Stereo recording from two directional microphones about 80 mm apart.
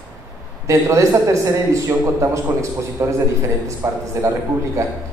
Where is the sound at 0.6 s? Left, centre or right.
Right.